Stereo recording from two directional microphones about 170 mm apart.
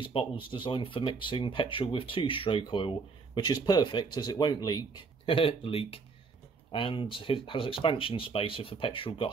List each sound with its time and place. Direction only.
0.0 s speech: 30° left (ahead or behind)